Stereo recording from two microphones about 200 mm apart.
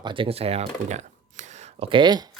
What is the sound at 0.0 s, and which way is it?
Speech, 25° right (ahead or behind).